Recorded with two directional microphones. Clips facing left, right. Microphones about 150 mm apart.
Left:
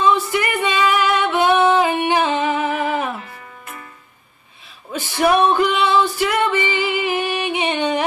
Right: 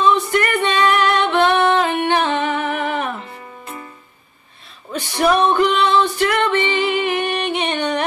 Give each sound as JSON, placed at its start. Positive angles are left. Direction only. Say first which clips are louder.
{"t": 0.0, "sound": "singing", "louder": "right 1 dB", "side_deg": 5}
{"t": 3.2, "sound": "music", "louder": "right 2 dB", "side_deg": -25}
{"t": 5.5, "sound": "music", "louder": "right 1 dB", "side_deg": 5}